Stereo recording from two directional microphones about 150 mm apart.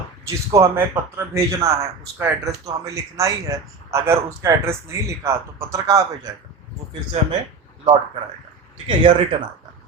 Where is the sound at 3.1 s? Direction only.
20° right (ahead or behind).